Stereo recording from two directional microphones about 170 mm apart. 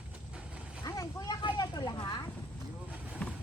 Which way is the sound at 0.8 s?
20° left (ahead or behind).